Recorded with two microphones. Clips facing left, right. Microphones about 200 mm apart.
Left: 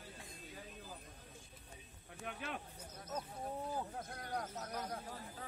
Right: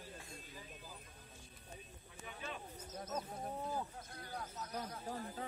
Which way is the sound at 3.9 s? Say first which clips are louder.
Left 5 dB; 65° left (ahead or behind).